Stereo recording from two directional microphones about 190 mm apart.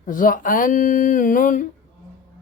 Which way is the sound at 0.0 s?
45° left (ahead or behind).